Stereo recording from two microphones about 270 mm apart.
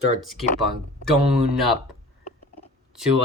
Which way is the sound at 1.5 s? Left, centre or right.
Centre.